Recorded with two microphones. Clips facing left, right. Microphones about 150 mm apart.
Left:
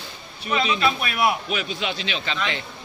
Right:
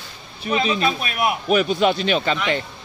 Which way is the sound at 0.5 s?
30° right (ahead or behind).